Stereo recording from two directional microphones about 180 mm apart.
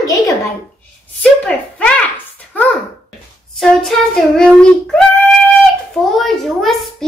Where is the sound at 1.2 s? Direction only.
5° left (ahead or behind).